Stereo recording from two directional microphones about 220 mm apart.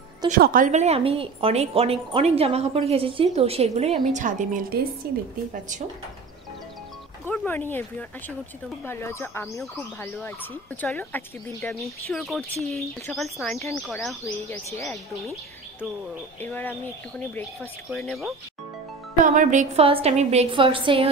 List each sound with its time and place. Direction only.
0.3 s a woman's voice: 40° right (ahead or behind)
7.2 s speech: 10° left (ahead or behind)
8.8 s speech: 10° left (ahead or behind)
10.8 s speech: 10° left (ahead or behind)
16.3 s speech: 10° left (ahead or behind)
17.8 s speech: centre (ahead or behind)
19.2 s a woman's voice: 35° right (ahead or behind)